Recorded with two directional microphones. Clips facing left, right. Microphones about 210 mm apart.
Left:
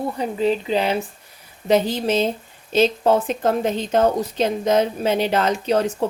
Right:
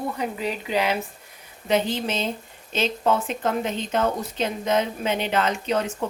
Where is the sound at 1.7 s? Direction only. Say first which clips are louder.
Left 5 dB; 40° left (ahead or behind).